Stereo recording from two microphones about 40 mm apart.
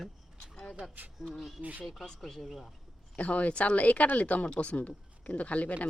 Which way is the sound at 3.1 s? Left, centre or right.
Left.